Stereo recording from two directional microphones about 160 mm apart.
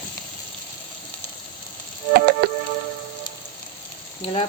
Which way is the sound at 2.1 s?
85° right.